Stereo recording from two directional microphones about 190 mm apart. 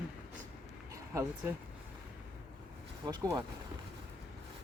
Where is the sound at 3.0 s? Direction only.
20° right (ahead or behind).